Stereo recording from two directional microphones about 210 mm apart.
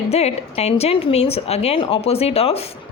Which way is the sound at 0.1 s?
30° left (ahead or behind).